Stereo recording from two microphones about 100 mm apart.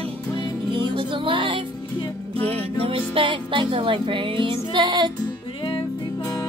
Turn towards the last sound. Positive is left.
turn(degrees=55)  # may be behind; listen again after turning